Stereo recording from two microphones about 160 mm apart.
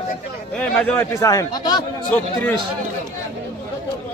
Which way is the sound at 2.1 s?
10° left (ahead or behind).